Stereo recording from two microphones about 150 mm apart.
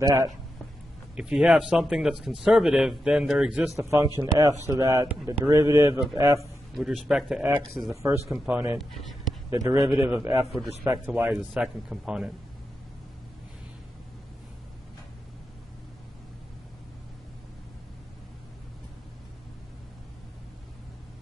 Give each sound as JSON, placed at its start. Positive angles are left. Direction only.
{"t": 0.0, "sound": "speech", "side_deg": -20}
{"t": 1.1, "sound": "speech", "side_deg": -5}
{"t": 3.7, "sound": "speech", "side_deg": -20}
{"t": 6.7, "sound": "a man's voice", "side_deg": 0}
{"t": 9.5, "sound": "a man's voice", "side_deg": -20}